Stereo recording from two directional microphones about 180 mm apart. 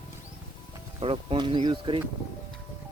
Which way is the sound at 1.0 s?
30° right (ahead or behind).